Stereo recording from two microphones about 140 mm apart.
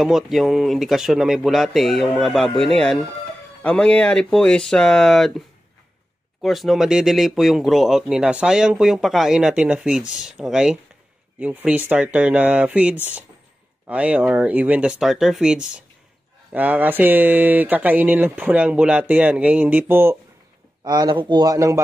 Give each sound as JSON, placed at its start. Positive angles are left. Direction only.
{"t": 0.0, "sound": "speech", "side_deg": 0}
{"t": 6.4, "sound": "speech", "side_deg": 0}
{"t": 20.8, "sound": "speech", "side_deg": -30}